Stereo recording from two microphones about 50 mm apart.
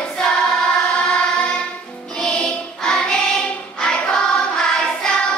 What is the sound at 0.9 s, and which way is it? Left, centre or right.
Music, left.